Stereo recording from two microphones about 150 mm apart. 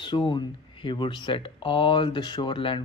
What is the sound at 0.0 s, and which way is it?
Speech, 30° left (ahead or behind).